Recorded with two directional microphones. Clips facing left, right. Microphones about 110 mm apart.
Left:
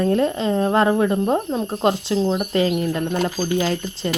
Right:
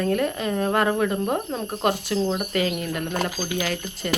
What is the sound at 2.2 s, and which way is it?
Speech, 10° left (ahead or behind).